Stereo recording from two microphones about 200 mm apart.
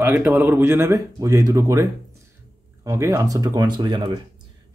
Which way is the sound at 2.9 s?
15° right (ahead or behind).